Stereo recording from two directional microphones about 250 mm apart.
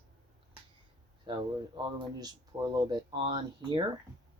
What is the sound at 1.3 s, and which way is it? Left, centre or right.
Speech, centre.